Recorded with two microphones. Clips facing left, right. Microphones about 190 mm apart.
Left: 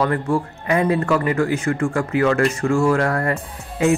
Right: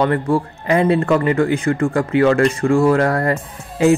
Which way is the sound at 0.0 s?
30° right (ahead or behind).